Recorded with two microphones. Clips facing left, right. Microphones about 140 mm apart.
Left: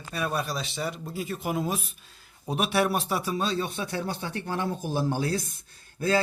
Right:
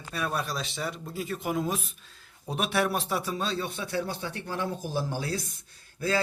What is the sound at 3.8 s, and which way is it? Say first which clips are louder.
Speech: even; 55° left (ahead or behind).